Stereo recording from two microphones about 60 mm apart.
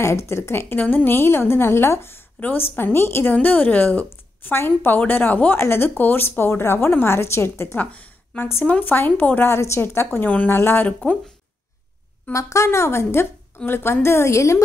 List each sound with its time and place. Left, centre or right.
0.0 s a woman's voice: left
2.4 s a woman's voice: left
3.4 s a woman's voice: left
7.7 s speech: left
8.9 s a woman's voice: left
9.5 s a woman's voice: left
9.8 s a woman's voice: left
10.9 s speech: centre
12.3 s a woman's voice: left